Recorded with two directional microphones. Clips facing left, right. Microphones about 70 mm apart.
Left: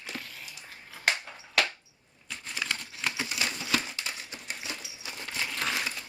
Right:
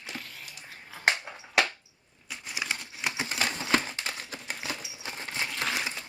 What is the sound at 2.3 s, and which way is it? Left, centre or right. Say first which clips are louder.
Crumpling: even; centre.